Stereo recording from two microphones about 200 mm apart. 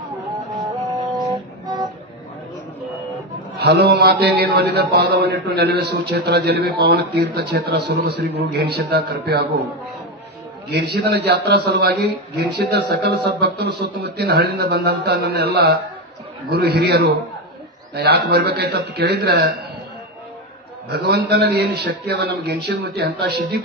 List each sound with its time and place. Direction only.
0.5 s music: 15° right (ahead or behind)
3.5 s a man's voice: 55° right (ahead or behind)
11.1 s a man's voice: 55° right (ahead or behind)
20.9 s a man's voice: 55° right (ahead or behind)